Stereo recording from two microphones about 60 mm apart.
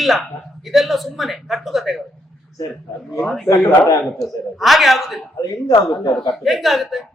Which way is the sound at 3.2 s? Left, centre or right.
Centre.